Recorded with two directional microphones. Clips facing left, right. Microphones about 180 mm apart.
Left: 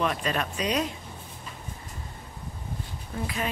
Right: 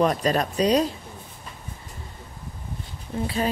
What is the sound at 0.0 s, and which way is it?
Speech, 40° right (ahead or behind).